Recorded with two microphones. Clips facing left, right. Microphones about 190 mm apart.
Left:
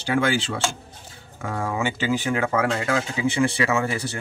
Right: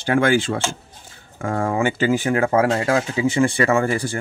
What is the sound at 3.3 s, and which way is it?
Speech, 50° right (ahead or behind).